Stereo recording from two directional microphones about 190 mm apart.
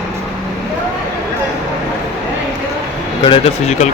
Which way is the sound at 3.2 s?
30° left (ahead or behind).